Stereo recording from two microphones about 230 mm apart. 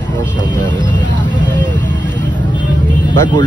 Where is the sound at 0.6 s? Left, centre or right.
Centre.